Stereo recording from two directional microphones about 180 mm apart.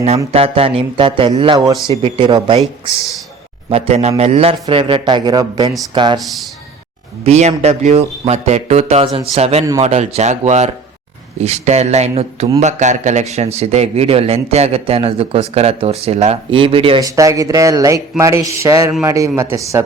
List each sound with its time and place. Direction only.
0.3 s speech: 35° right (ahead or behind)
3.7 s a man's voice: 35° right (ahead or behind)
7.3 s a man's voice: 35° right (ahead or behind)
17.1 s speech: 20° right (ahead or behind)
18.2 s a sound: 15° right (ahead or behind)